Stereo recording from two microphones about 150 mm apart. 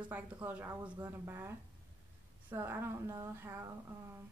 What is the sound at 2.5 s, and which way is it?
A woman's voice, 15° right (ahead or behind).